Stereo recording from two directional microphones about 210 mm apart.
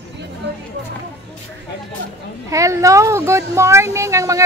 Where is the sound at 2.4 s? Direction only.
15° right (ahead or behind).